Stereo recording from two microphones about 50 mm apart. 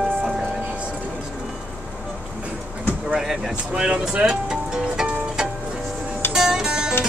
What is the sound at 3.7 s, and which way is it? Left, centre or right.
Speech, centre.